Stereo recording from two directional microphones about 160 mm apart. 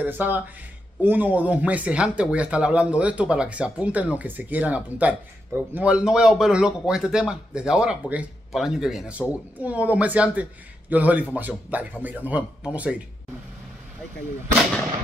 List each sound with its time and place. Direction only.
0.0 s a man's voice: 10° right (ahead or behind)